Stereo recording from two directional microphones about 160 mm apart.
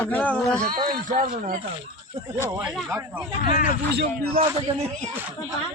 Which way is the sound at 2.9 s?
10° right (ahead or behind).